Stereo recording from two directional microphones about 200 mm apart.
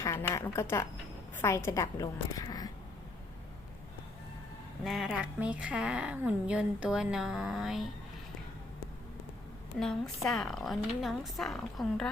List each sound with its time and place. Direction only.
0.0 s a sound: 15° left (ahead or behind)
0.3 s a woman's voice: 15° left (ahead or behind)
4.8 s a woman's voice: centre (ahead or behind)
9.8 s a woman's voice: centre (ahead or behind)